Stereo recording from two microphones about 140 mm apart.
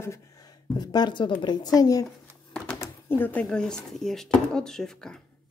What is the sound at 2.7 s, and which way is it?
Speech, 15° left (ahead or behind).